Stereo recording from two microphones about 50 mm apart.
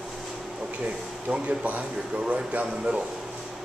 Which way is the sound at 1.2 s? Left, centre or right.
Right.